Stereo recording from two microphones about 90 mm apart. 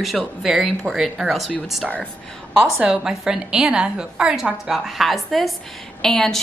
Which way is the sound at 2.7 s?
5° right (ahead or behind).